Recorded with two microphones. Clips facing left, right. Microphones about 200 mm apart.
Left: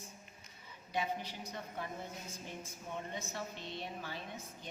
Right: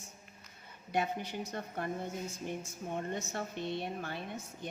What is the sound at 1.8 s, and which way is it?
A woman's voice, 55° right (ahead or behind).